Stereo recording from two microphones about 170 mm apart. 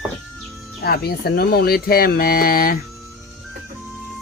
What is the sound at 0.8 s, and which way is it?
Speech, 65° left (ahead or behind).